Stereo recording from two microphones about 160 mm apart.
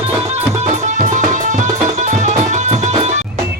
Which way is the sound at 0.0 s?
40° right (ahead or behind).